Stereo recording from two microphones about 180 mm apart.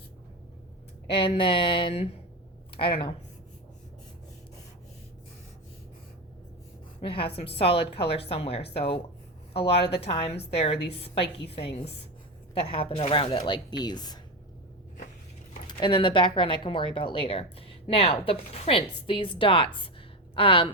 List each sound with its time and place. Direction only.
1.2 s a woman's voice: 30° left (ahead or behind)
7.0 s a woman's voice: 30° left (ahead or behind)
15.6 s a woman's voice: 25° left (ahead or behind)